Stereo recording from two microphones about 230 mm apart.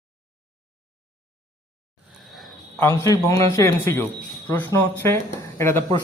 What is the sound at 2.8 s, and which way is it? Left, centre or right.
Speech, centre.